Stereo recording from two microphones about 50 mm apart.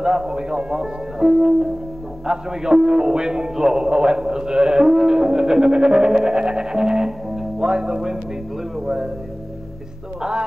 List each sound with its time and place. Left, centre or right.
0.0 s a man's voice: centre